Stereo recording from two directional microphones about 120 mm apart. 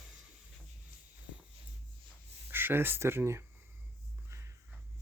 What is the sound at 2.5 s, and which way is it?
Speech, 20° right (ahead or behind).